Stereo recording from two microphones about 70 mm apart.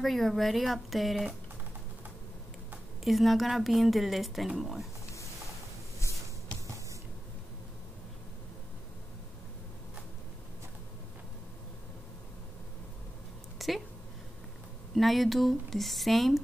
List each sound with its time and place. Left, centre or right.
0.0 s a woman's voice: centre
3.0 s a woman's voice: centre
13.6 s a sound: centre
15.0 s a woman's voice: centre